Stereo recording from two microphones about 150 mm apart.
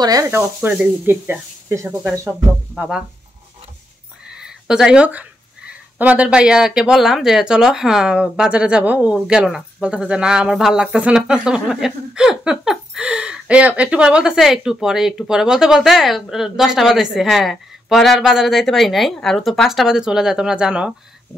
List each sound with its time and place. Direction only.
0.0 s speech: 20° right (ahead or behind)
4.3 s a sound: 5° right (ahead or behind)
5.7 s speech: 10° right (ahead or behind)